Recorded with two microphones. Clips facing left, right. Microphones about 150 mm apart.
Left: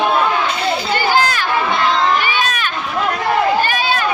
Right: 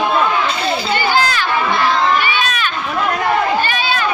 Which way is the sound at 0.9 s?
50° left (ahead or behind).